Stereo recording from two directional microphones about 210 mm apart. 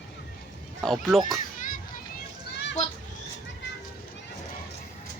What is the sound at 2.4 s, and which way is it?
Children playing, 55° left (ahead or behind).